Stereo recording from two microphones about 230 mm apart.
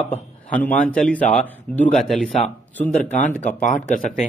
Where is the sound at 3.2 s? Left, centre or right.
Left.